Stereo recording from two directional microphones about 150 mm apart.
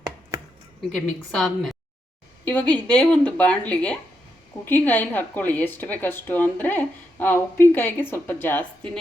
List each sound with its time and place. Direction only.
0.9 s a woman's voice: centre (ahead or behind)
2.4 s a sound: 10° left (ahead or behind)
2.7 s a woman's voice: 10° left (ahead or behind)